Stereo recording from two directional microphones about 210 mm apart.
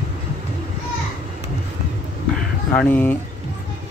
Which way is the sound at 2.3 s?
5° left (ahead or behind).